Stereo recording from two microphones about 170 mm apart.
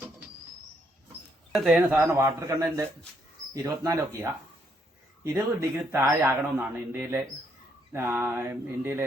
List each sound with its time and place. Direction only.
1.5 s speech: 5° right (ahead or behind)